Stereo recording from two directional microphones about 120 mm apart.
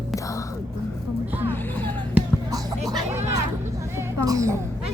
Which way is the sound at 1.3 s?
15° right (ahead or behind).